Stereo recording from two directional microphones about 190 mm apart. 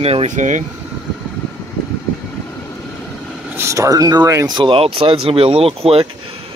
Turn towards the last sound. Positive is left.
turn(degrees=-30)  # may be behind; listen again after turning